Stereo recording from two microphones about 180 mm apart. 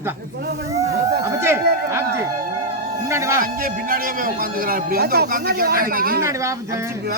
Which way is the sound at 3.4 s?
50° right (ahead or behind).